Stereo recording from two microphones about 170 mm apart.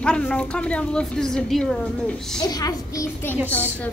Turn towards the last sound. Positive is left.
turn(degrees=10)  # may be behind; listen again after turning